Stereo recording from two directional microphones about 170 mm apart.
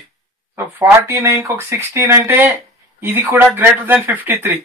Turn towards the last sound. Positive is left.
turn(degrees=-10)  # may be behind; listen again after turning